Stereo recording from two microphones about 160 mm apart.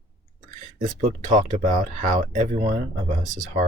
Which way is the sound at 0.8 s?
55° right (ahead or behind).